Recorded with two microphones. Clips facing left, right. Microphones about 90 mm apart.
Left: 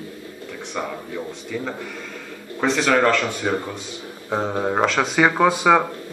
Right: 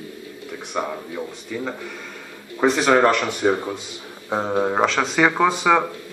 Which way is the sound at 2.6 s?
15° right (ahead or behind).